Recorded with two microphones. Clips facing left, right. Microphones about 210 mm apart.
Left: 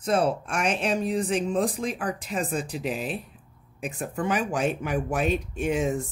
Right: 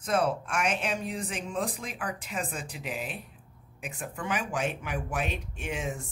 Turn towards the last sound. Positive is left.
turn(degrees=40)  # may be behind; listen again after turning